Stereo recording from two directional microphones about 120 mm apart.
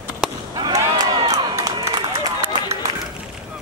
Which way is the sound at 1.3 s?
25° right (ahead or behind).